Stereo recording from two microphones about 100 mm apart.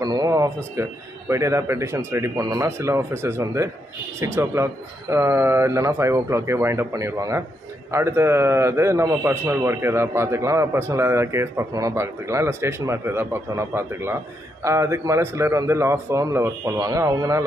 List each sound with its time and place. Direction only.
0.0 s speech: 40° right (ahead or behind)
0.8 s a man's voice: 25° right (ahead or behind)